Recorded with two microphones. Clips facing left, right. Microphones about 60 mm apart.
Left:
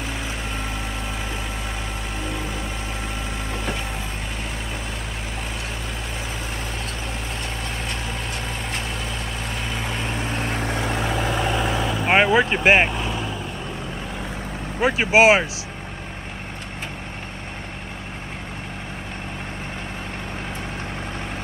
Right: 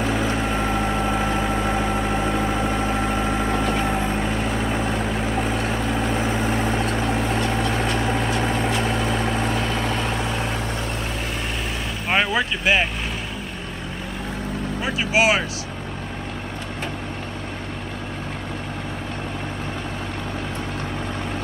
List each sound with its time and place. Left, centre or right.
0.0 s vehicle: centre
1.2 s vehicle: right
1.8 s vehicle: centre
7.0 s vehicle: right
8.0 s vehicle: centre
10.9 s vehicle: left
12.1 s vehicle: left
12.4 s vehicle: left
14.8 s vehicle: left